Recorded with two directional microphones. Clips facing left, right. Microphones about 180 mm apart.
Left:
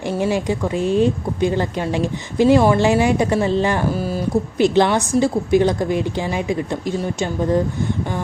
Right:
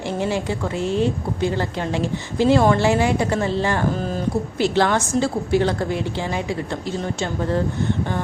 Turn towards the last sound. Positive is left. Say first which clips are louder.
# left 4 dB
turn(degrees=15)  # may be behind; listen again after turning